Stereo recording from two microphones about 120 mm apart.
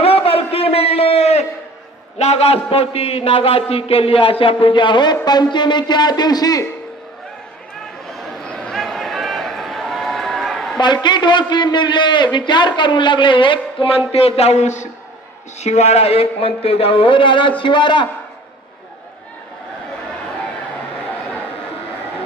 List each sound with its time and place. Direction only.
0.0 s a sound: 55° left (ahead or behind)
2.1 s a man's voice: 65° left (ahead or behind); by 6.7 s 30° left (ahead or behind)
8.1 s run: centre (ahead or behind)
10.8 s a man's voice: 40° left (ahead or behind)